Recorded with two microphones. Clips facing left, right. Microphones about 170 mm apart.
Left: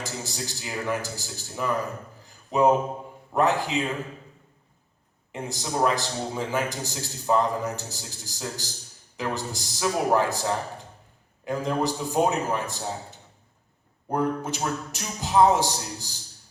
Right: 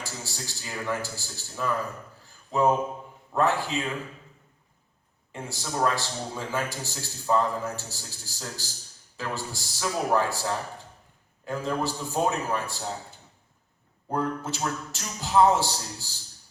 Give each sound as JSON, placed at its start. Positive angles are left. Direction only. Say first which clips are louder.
{"t": 0.0, "sound": "a man's voice", "louder": "left 4 dB", "side_deg": 20}
{"t": 2.2, "sound": "a sound", "louder": "left 3 dB", "side_deg": 20}
{"t": 3.3, "sound": "a man's voice", "louder": "left 2 dB", "side_deg": 20}
{"t": 5.3, "sound": "a man's voice", "louder": "left 3 dB", "side_deg": 20}